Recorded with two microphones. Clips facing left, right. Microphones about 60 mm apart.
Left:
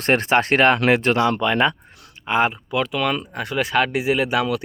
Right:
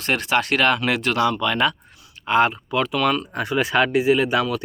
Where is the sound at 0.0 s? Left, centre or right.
Left.